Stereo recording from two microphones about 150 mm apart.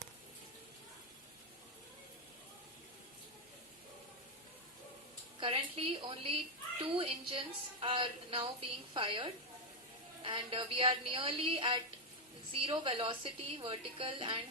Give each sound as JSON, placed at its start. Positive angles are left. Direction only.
{"t": 5.4, "sound": "a woman's voice", "side_deg": -40}